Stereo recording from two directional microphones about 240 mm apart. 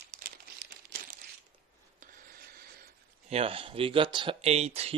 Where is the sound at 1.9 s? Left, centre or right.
Right.